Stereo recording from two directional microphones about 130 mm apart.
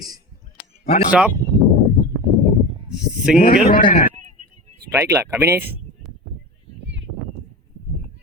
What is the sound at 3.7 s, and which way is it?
Speech, 90° left.